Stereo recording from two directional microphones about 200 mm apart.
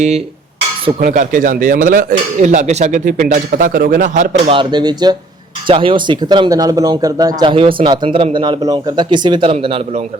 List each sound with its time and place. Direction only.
0.9 s speech: 40° right (ahead or behind)
4.5 s speech: 25° right (ahead or behind)